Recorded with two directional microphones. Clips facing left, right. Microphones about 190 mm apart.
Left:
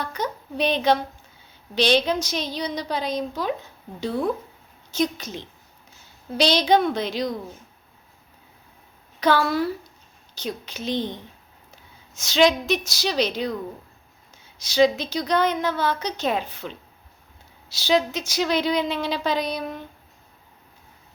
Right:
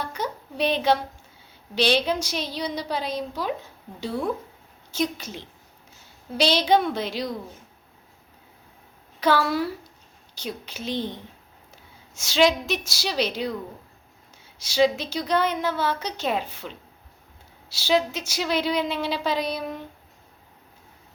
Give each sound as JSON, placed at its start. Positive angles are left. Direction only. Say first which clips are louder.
{"t": 0.0, "sound": "a woman's voice", "louder": "left 2 dB", "side_deg": -5}
{"t": 4.9, "sound": "a woman's voice", "louder": "left 2 dB", "side_deg": -10}
{"t": 9.2, "sound": "a woman's voice", "louder": "left 1 dB", "side_deg": -10}
{"t": 12.1, "sound": "a woman's voice", "louder": "left 1 dB", "side_deg": -10}
{"t": 14.6, "sound": "a woman's voice", "louder": "left 2 dB", "side_deg": -5}
{"t": 17.7, "sound": "speech", "louder": "left 1 dB", "side_deg": -5}